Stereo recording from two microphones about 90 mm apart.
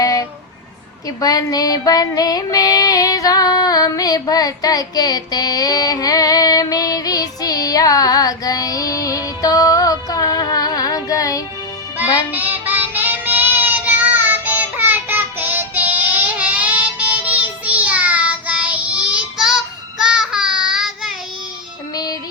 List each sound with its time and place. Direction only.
0.0 s a sound: 40° left (ahead or behind)
11.9 s child singing: 20° right (ahead or behind)
21.9 s music: 45° left (ahead or behind)